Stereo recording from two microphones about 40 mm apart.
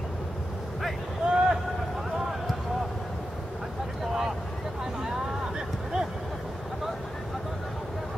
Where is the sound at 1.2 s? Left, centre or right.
Right.